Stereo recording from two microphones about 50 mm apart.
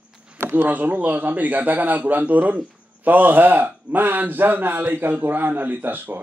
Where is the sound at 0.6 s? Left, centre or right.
Right.